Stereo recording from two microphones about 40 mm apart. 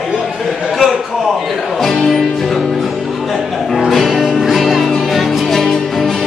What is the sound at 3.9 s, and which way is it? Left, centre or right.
Music, centre.